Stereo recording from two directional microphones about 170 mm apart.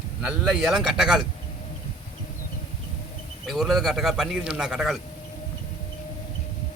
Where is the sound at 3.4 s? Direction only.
5° right (ahead or behind).